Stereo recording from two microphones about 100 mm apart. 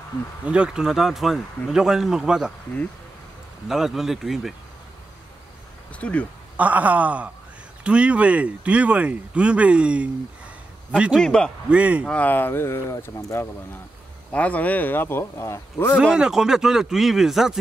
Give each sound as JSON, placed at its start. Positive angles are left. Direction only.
{"t": 0.5, "sound": "speech", "side_deg": -10}
{"t": 3.6, "sound": "speech", "side_deg": -5}
{"t": 5.9, "sound": "a man's voice", "side_deg": 10}
{"t": 6.5, "sound": "a man's voice", "side_deg": -15}
{"t": 11.1, "sound": "a man's voice", "side_deg": 10}
{"t": 11.7, "sound": "speech", "side_deg": -15}
{"t": 12.1, "sound": "speech", "side_deg": 15}
{"t": 14.3, "sound": "speech", "side_deg": 15}
{"t": 16.0, "sound": "speech", "side_deg": -5}